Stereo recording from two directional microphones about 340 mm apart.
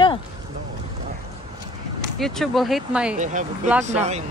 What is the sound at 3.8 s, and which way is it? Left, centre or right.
Speech, centre.